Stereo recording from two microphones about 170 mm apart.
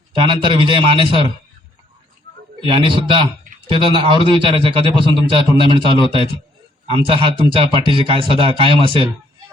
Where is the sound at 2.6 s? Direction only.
30° right (ahead or behind).